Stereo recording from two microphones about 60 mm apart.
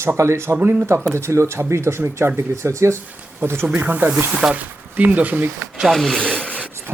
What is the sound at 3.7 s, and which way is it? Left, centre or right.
Speech, right.